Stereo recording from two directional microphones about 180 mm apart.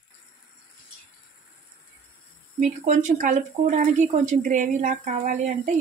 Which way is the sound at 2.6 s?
45° right (ahead or behind).